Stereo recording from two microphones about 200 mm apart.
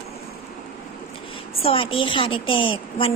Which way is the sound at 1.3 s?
30° left (ahead or behind).